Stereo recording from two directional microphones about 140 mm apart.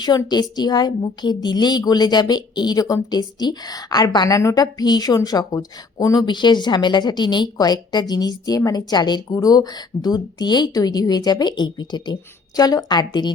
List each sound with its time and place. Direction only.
0.0 s a woman's voice: 30° left (ahead or behind)